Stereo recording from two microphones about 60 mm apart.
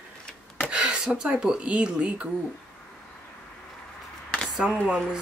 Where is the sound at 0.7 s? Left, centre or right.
Centre.